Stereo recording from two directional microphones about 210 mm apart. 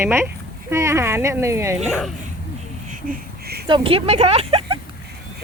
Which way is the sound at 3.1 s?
50° right (ahead or behind).